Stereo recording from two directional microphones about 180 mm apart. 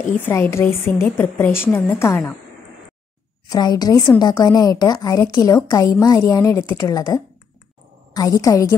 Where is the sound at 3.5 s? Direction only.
20° left (ahead or behind).